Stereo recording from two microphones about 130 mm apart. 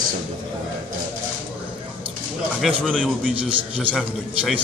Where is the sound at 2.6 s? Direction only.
5° left (ahead or behind).